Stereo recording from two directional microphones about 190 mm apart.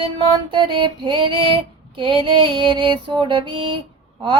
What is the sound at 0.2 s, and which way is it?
Mantra, 25° right (ahead or behind).